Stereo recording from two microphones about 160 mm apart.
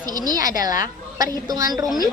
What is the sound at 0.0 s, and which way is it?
A woman's voice, 25° right (ahead or behind).